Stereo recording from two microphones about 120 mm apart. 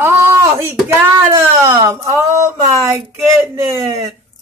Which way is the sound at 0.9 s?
20° right (ahead or behind).